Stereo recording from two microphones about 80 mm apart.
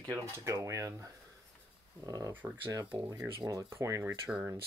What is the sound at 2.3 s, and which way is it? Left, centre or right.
Speech, right.